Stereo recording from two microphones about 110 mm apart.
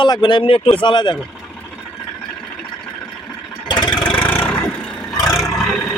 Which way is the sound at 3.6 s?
45° left (ahead or behind).